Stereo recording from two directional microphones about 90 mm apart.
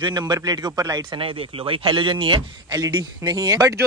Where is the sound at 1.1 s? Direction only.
80° right.